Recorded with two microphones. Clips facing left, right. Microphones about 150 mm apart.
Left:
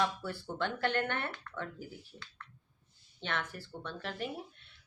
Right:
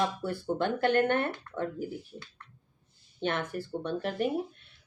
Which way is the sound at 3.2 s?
50° right (ahead or behind).